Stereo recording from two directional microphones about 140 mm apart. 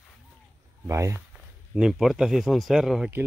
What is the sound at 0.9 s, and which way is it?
Speech, 20° right (ahead or behind).